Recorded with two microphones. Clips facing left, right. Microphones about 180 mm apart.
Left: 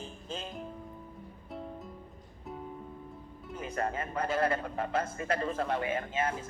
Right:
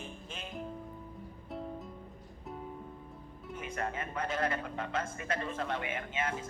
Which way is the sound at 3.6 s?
35° left (ahead or behind).